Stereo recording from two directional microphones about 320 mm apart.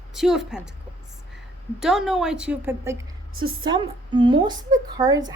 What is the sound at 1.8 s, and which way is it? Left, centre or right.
A woman's voice, centre.